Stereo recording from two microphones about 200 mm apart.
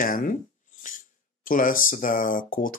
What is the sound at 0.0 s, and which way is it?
Speech, 40° left (ahead or behind).